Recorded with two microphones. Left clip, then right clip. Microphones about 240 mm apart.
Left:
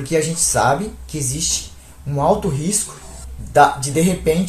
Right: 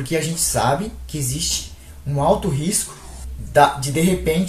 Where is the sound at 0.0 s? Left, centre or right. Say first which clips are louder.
Left 4 dB; centre.